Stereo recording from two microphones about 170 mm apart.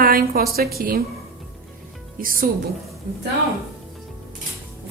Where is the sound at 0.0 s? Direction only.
60° right (ahead or behind).